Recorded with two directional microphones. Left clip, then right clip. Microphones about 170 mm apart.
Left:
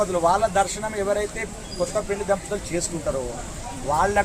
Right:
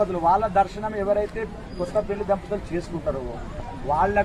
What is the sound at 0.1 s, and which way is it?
Speech, 25° left (ahead or behind).